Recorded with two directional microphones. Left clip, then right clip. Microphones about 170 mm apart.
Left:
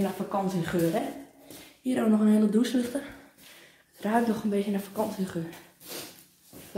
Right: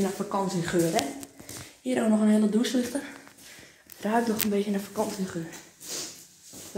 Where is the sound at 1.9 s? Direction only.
20° right (ahead or behind).